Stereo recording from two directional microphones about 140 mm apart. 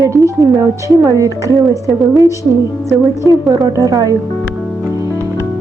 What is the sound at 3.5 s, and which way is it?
Speech, 25° right (ahead or behind).